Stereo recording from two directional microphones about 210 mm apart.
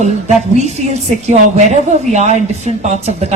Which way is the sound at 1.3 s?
35° right (ahead or behind).